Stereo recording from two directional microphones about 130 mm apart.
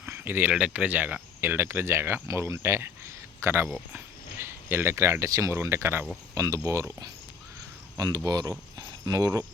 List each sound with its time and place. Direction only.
0.0 s speech: 15° right (ahead or behind)